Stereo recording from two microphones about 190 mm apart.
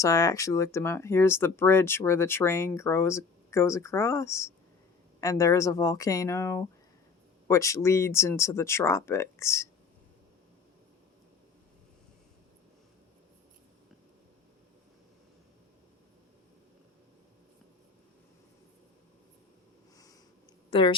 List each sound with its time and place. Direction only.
0.0 s speech: 20° left (ahead or behind)
20.7 s speech: 25° left (ahead or behind)